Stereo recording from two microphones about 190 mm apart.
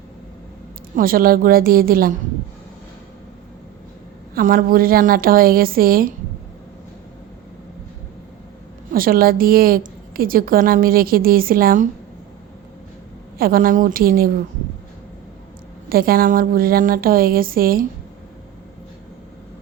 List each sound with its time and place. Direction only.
0.9 s a woman's voice: 50° right (ahead or behind)
4.4 s a woman's voice: 50° right (ahead or behind)
8.9 s a woman's voice: 50° right (ahead or behind)
13.4 s a woman's voice: 50° right (ahead or behind)
15.9 s a woman's voice: 50° right (ahead or behind)